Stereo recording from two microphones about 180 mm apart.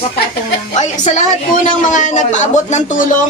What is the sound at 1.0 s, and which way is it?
A man's voice, 40° left (ahead or behind).